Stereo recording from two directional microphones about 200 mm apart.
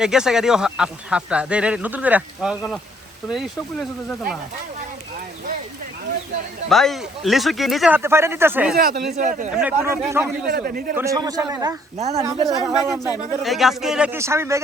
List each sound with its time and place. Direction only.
0.0 s speech: 5° right (ahead or behind)
6.7 s speech: centre (ahead or behind)
8.7 s speech: 50° right (ahead or behind)
9.1 s a man's voice: 40° right (ahead or behind)
9.6 s speech: 10° right (ahead or behind)
10.5 s speech: 45° right (ahead or behind)
10.9 s speech: 15° right (ahead or behind)
11.9 s a man's voice: 35° right (ahead or behind)
12.2 s speech: 15° right (ahead or behind)
13.4 s speech: centre (ahead or behind)